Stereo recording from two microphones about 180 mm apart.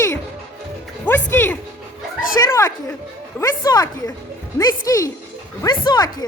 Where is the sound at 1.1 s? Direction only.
10° left (ahead or behind).